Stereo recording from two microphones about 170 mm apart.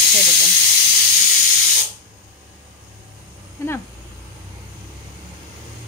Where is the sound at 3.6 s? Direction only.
15° left (ahead or behind).